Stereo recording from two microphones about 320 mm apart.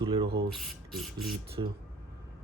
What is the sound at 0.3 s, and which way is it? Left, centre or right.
Speech, right.